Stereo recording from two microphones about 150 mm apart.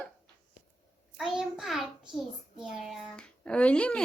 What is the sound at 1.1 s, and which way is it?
A woman's voice, 5° right (ahead or behind).